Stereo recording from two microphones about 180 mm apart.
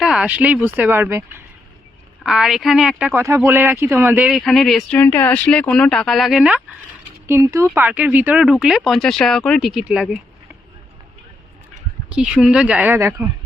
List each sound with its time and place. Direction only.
0.0 s speech: 5° right (ahead or behind)
3.1 s speech: 15° right (ahead or behind)
7.3 s speech: 15° right (ahead or behind)
12.0 s speech: 5° right (ahead or behind)